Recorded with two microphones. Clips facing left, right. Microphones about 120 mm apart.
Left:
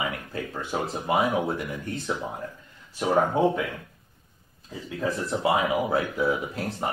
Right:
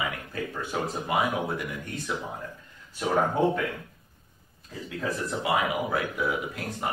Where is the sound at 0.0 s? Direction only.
30° left (ahead or behind).